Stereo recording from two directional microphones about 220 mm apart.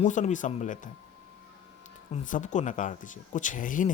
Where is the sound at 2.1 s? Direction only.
35° left (ahead or behind).